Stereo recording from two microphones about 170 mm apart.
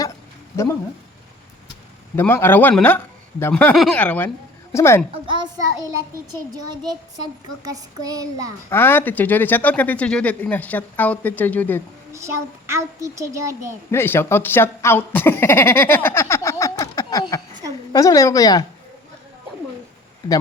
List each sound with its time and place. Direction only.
0.5 s speech: 15° left (ahead or behind)
2.1 s speech: 15° left (ahead or behind)
5.1 s child singing: 30° right (ahead or behind)
8.7 s speech: 15° left (ahead or behind)
12.1 s a child's voice: 15° right (ahead or behind)
13.9 s a woman's voice: 15° left (ahead or behind)